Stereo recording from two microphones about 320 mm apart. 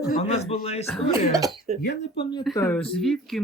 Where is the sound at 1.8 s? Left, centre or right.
Left.